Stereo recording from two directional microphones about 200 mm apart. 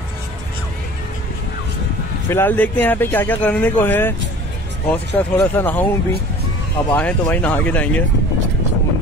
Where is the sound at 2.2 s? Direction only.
10° left (ahead or behind).